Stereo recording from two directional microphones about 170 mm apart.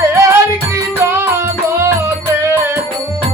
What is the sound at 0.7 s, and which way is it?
Music, 15° right (ahead or behind).